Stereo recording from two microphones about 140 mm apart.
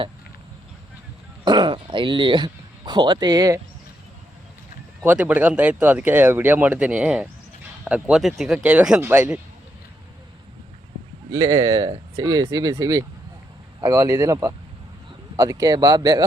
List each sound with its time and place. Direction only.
1.5 s speech: 35° right (ahead or behind)
5.0 s speech: 10° right (ahead or behind)
11.3 s speech: 20° right (ahead or behind)